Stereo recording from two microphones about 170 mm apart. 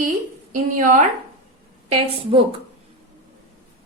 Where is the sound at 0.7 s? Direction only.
50° right (ahead or behind).